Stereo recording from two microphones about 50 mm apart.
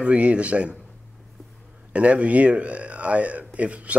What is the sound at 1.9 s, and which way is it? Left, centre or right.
Speech, right.